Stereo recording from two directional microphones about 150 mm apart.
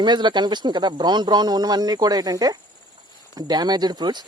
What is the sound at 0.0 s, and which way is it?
Speech, 30° right (ahead or behind).